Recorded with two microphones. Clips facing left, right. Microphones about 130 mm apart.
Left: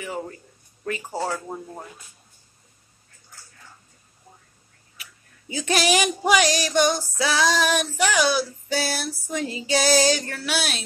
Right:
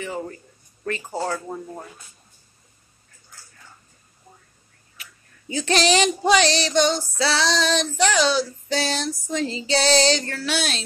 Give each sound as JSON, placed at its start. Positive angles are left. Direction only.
{"t": 0.0, "sound": "female singing", "side_deg": 10}
{"t": 5.5, "sound": "female singing", "side_deg": 10}